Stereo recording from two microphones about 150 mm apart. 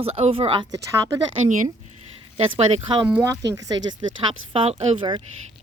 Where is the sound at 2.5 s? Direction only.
45° right (ahead or behind).